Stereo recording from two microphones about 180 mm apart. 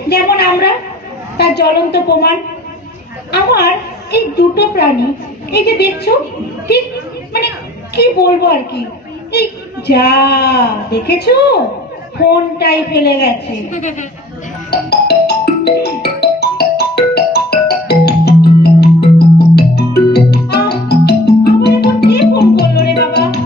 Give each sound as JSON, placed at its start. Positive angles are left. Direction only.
{"t": 0.1, "sound": "a woman's voice", "side_deg": 65}
{"t": 3.3, "sound": "a woman's voice", "side_deg": 65}
{"t": 7.3, "sound": "a woman's voice", "side_deg": 65}
{"t": 13.7, "sound": "a woman's voice", "side_deg": 40}
{"t": 14.7, "sound": "music", "side_deg": 65}